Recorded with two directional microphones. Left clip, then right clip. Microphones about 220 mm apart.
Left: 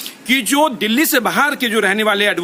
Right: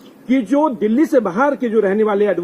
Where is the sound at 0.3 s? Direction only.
35° left (ahead or behind).